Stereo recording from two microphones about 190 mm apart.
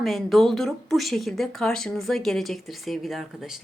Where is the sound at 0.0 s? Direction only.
Centre (ahead or behind).